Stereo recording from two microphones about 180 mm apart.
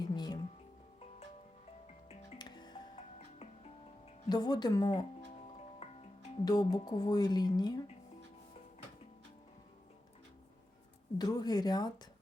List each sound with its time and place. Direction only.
0.0 s music: 25° left (ahead or behind)
2.0 s music: 30° left (ahead or behind)
4.3 s speech: 25° left (ahead or behind)
5.8 s music: 35° left (ahead or behind)
6.4 s speech: 20° left (ahead or behind)
11.2 s speech: 20° left (ahead or behind)